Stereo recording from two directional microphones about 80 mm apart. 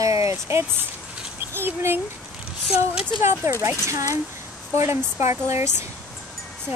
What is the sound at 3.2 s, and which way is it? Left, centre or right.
Speech, right.